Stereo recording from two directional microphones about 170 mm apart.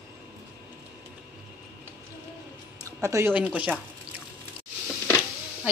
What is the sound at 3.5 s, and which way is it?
Speech, 10° right (ahead or behind).